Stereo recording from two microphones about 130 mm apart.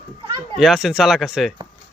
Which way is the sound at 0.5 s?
5° right (ahead or behind).